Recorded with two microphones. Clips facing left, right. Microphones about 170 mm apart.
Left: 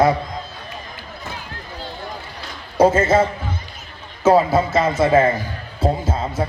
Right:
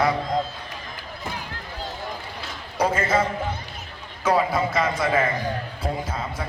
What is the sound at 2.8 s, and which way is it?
Speech, 25° left (ahead or behind).